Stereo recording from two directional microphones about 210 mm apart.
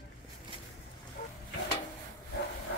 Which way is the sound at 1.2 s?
40° left (ahead or behind).